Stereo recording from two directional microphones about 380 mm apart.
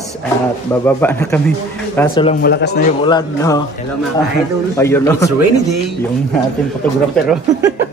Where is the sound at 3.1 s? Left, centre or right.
Centre.